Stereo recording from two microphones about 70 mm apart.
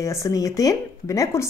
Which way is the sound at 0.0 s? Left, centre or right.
Left.